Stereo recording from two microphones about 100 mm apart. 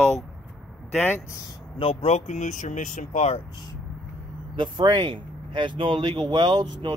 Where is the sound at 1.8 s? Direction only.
65° left (ahead or behind); by 2.7 s 90° left.